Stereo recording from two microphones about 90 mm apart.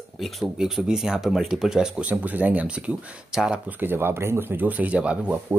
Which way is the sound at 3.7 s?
20° right (ahead or behind).